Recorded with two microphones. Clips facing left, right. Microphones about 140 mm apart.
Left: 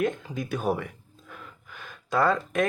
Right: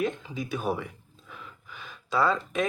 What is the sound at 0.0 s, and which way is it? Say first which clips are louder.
Speech: left 2 dB; 55° left (ahead or behind).